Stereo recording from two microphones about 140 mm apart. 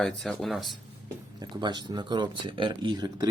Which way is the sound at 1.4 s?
30° right (ahead or behind).